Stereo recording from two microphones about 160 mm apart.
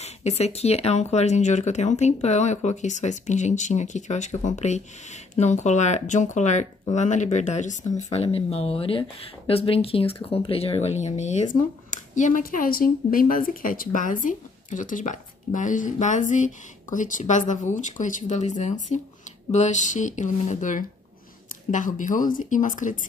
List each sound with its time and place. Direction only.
0.0 s speech: 40° left (ahead or behind)